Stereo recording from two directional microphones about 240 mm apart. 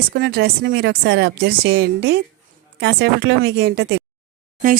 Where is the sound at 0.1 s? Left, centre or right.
Right.